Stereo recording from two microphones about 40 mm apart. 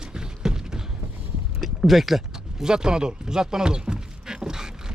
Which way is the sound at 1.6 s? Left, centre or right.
Centre.